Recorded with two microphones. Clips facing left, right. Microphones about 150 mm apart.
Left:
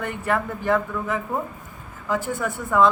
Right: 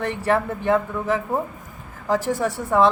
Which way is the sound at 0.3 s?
25° right (ahead or behind).